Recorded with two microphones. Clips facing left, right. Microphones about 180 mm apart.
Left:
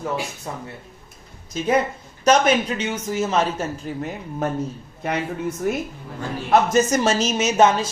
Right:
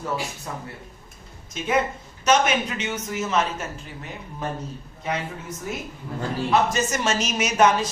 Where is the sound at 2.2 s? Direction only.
35° left (ahead or behind).